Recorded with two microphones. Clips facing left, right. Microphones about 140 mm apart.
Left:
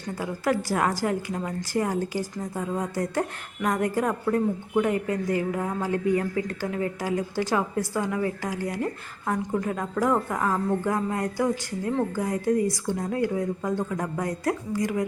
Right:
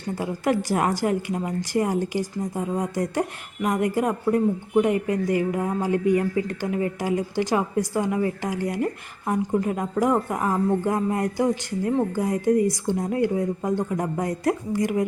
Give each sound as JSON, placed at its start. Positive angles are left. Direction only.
{"t": 0.2, "sound": "a woman's voice", "side_deg": -20}